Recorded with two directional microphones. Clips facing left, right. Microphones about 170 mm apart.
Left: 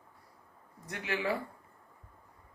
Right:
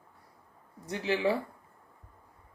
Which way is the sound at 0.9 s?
30° right (ahead or behind).